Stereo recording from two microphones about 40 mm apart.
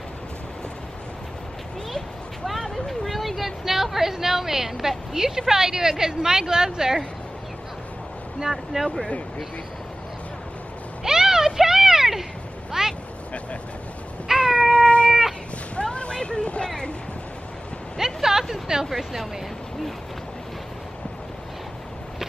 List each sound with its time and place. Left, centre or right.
2.7 s hubbub: centre
5.5 s speech: centre
8.4 s speech: centre
11.1 s a sound: centre
14.4 s cat: centre
15.7 s a sound: left
17.9 s a sound: centre
18.5 s speech: centre
18.9 s speech: centre